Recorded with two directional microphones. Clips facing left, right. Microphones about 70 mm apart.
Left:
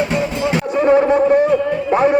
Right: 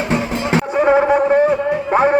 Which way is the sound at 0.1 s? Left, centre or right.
Right.